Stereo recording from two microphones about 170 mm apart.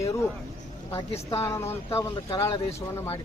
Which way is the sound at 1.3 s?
15° left (ahead or behind).